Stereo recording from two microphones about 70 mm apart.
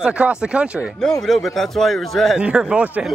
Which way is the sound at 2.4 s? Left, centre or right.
Centre.